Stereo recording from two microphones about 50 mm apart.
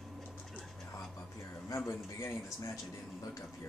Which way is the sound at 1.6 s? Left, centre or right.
Left.